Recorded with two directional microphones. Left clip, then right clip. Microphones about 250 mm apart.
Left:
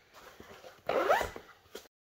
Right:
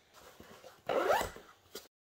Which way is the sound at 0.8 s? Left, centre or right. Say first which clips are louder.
Left 2 dB; centre.